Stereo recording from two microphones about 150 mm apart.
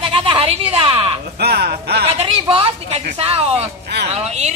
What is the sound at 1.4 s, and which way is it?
Speech, 90° right.